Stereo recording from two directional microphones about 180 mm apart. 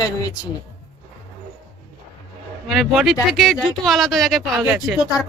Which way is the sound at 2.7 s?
Centre (ahead or behind).